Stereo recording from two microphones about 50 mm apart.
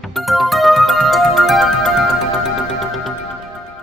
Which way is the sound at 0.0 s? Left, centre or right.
Centre.